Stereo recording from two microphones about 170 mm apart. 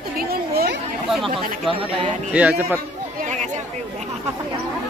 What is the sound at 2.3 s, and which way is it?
Speech, 10° right (ahead or behind).